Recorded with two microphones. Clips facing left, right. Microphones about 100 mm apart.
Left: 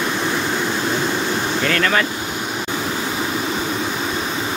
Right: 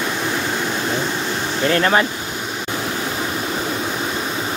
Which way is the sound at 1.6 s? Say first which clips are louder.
Right 4 dB; 25° right (ahead or behind).